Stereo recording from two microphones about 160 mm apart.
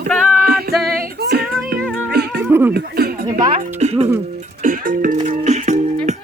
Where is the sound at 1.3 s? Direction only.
75° right (ahead or behind).